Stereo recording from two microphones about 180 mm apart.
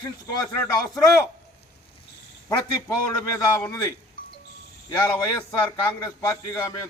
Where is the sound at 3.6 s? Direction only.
15° left (ahead or behind).